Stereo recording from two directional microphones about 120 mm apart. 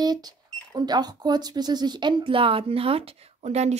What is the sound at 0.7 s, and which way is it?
A woman's voice, 35° right (ahead or behind).